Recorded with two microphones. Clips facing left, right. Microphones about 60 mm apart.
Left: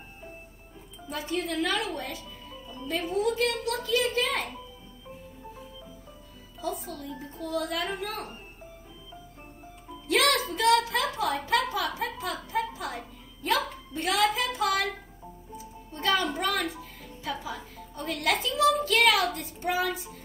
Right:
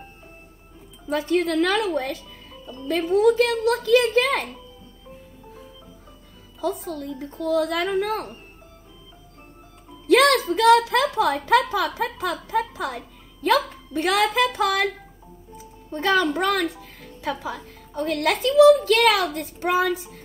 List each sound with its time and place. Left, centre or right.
1.3 s a woman's voice: right
2.9 s a child's voice: right
6.6 s a woman's voice: right
10.0 s music: right
10.5 s a child's voice: right
16.0 s a woman's voice: right
17.0 s music: right
18.4 s a child's voice: right
19.9 s child singing: centre